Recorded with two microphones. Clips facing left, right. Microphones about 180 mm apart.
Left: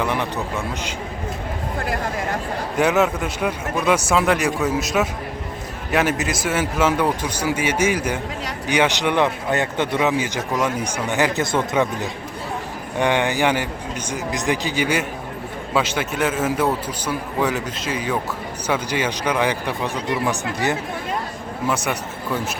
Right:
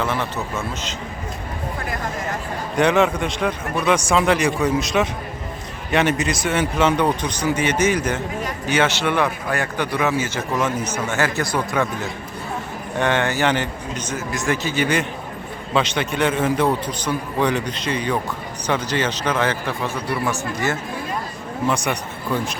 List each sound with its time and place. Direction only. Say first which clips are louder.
0.0 s speech: left 1 dB; 15° left (ahead or behind)
2.7 s a man's voice: right 1 dB; 5° left (ahead or behind); by 11.9 s 20° left (ahead or behind)
13.0 s a man's voice: left 1 dB; 15° left (ahead or behind)
21.7 s a man's voice: even; 5° left (ahead or behind)